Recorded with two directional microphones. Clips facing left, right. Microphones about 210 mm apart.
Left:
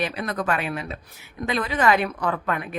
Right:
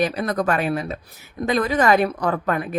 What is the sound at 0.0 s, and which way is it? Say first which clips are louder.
A woman's voice: right 5 dB; 40° right (ahead or behind).